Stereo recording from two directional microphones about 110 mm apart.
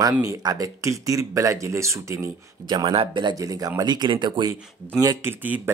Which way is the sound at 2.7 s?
45° right (ahead or behind).